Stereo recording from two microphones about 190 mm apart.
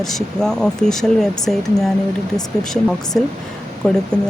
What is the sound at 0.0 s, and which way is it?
Speech, centre (ahead or behind).